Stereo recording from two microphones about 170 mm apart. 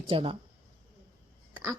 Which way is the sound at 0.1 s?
30° right (ahead or behind).